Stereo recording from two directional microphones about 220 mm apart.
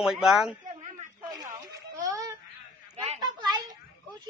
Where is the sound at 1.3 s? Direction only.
15° right (ahead or behind).